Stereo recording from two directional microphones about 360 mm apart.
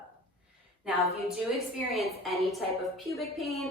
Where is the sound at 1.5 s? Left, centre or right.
Centre.